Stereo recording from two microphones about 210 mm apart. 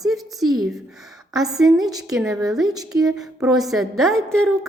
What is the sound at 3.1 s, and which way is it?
Speech, centre (ahead or behind).